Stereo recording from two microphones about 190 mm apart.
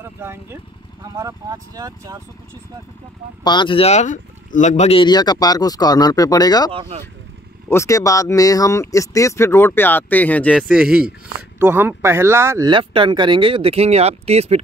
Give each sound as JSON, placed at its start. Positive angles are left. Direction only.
{"t": 0.0, "sound": "speech", "side_deg": -10}
{"t": 3.4, "sound": "speech", "side_deg": 25}
{"t": 6.7, "sound": "speech", "side_deg": -30}
{"t": 7.7, "sound": "speech", "side_deg": 15}